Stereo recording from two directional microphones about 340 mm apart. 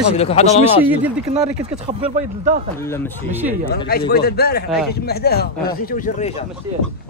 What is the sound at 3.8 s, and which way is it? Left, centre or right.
Speech, left.